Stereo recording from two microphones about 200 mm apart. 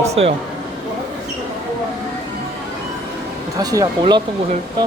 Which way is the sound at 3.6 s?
20° right (ahead or behind).